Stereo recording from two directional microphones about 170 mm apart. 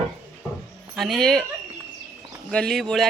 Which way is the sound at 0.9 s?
Centre (ahead or behind).